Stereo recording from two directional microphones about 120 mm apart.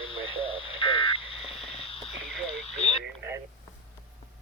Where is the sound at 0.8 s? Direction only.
45° left (ahead or behind).